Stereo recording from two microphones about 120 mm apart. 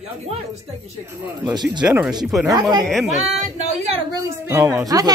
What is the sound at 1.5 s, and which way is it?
Speech, 35° right (ahead or behind).